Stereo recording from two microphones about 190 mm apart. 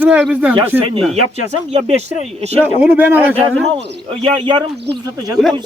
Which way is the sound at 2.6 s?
10° right (ahead or behind).